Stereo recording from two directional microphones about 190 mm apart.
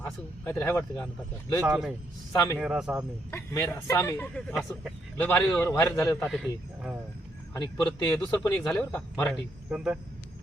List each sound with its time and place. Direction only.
0.0 s speech: 10° left (ahead or behind)
1.6 s speech: 5° right (ahead or behind)
2.3 s speech: 15° left (ahead or behind)
2.6 s speech: 5° right (ahead or behind)
3.3 s speech: 15° left (ahead or behind)
6.2 s speech: centre (ahead or behind)
7.5 s speech: 20° left (ahead or behind)
8.0 s speech: 10° left (ahead or behind)
9.3 s speech: 5° right (ahead or behind)